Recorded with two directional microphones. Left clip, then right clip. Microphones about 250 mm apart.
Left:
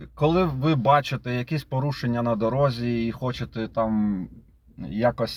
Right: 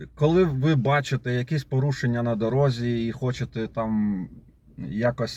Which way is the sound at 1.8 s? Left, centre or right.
Left.